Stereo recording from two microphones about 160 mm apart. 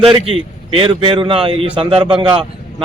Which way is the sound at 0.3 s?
35° right (ahead or behind).